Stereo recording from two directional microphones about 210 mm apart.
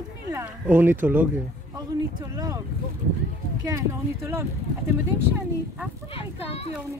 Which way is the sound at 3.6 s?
15° right (ahead or behind).